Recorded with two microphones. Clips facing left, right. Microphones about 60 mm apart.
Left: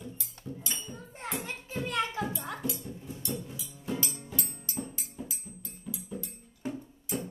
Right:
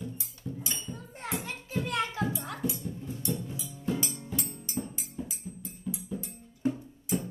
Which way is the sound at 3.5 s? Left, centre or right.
Centre.